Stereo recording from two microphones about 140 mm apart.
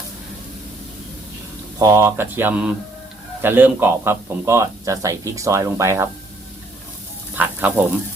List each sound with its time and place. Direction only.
1.8 s speech: 20° right (ahead or behind)
7.3 s frying: 10° right (ahead or behind)